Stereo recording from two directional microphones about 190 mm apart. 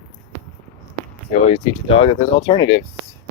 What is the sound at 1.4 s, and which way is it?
Speech, 30° left (ahead or behind).